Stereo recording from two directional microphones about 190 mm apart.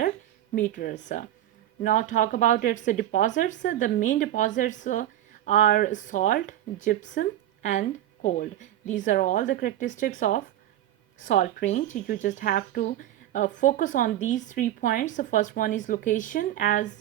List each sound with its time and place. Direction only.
0.5 s speech: 45° left (ahead or behind)